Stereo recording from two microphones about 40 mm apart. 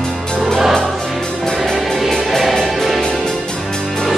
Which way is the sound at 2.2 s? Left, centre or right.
Centre.